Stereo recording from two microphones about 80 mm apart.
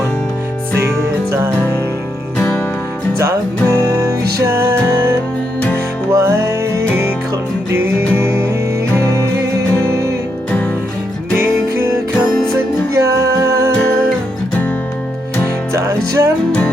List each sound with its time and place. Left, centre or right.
2.4 s music: left
3.2 s music: right
6.1 s music: right
11.3 s music: right
15.7 s music: right